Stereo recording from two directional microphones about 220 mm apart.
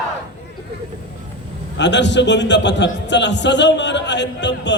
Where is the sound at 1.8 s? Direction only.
55° left (ahead or behind).